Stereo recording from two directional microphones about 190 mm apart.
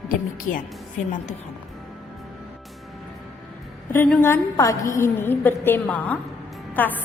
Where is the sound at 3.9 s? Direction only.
10° left (ahead or behind).